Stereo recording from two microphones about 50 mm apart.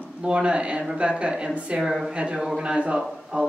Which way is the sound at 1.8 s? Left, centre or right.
Centre.